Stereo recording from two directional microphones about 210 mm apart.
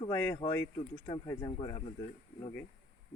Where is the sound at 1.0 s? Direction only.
20° left (ahead or behind).